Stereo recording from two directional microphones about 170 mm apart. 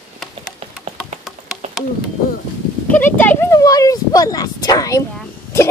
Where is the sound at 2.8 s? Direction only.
10° left (ahead or behind).